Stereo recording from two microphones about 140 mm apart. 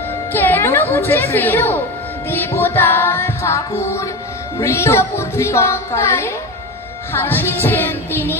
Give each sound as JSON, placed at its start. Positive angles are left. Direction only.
{"t": 0.3, "sound": "music", "side_deg": 15}
{"t": 4.6, "sound": "speech", "side_deg": 20}
{"t": 7.1, "sound": "music", "side_deg": 15}